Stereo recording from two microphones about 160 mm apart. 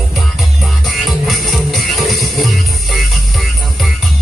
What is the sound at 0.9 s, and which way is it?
Music, centre (ahead or behind).